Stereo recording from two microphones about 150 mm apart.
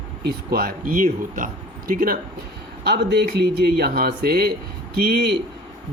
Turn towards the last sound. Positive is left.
turn(degrees=-90)